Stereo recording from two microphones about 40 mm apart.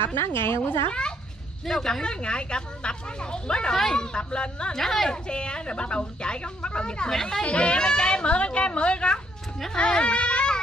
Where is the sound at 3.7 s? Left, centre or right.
Centre.